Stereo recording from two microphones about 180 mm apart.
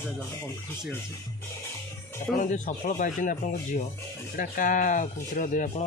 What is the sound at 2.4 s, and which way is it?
Speech, 45° left (ahead or behind).